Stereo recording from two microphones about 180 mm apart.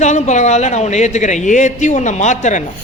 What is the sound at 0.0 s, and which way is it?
A man's voice, 40° left (ahead or behind).